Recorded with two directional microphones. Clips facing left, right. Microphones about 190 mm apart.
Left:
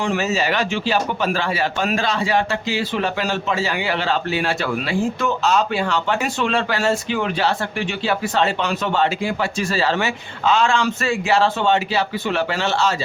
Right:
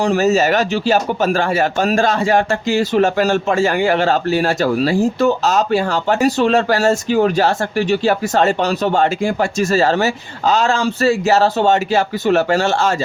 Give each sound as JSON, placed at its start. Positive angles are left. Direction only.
{"t": 0.0, "sound": "speech", "side_deg": -40}